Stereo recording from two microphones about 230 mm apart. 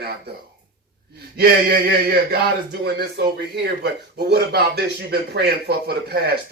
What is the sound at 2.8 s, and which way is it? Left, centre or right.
Speech, right.